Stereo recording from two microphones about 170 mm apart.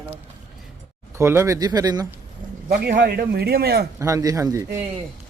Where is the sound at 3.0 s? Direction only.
65° right (ahead or behind).